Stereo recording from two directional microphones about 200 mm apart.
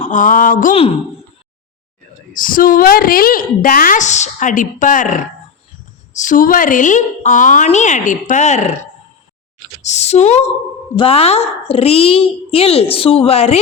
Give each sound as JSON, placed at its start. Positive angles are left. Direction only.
{"t": 0.0, "sound": "a woman's voice", "side_deg": 40}
{"t": 0.7, "sound": "a child's voice", "side_deg": 25}
{"t": 2.3, "sound": "a woman's voice", "side_deg": 45}
{"t": 9.8, "sound": "a woman's voice", "side_deg": 35}